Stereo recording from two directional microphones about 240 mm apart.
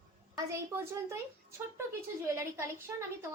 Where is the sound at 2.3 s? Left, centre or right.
Centre.